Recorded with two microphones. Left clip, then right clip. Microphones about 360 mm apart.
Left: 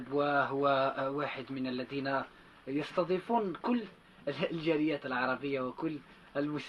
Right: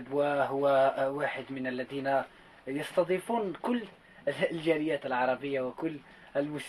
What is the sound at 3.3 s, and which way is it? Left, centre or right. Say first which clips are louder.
Speech: right 1 dB; centre.